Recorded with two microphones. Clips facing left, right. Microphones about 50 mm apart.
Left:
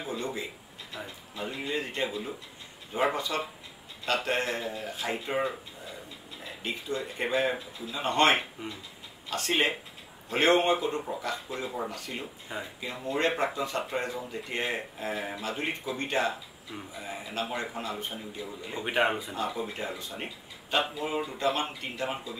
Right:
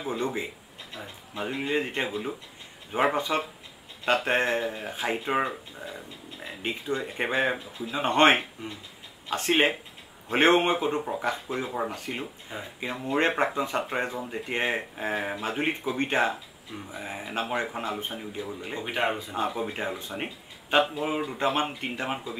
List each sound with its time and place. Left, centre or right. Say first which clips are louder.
0.0 s speech: right 4 dB; right
6.6 s speech: right 3 dB; right
12.5 s speech: left 2 dB; centre
12.8 s speech: right 4 dB; right
18.8 s speech: left 2 dB; centre
19.3 s speech: right 3 dB; right